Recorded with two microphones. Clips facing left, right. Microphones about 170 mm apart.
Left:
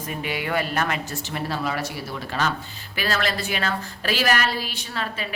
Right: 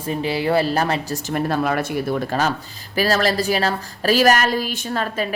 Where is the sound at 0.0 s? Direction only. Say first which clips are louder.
Right 7 dB; 30° right (ahead or behind).